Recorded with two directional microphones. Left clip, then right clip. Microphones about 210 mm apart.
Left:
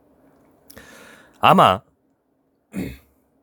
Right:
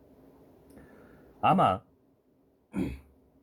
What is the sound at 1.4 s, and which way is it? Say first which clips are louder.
Speech: left 11 dB; 55° left (ahead or behind).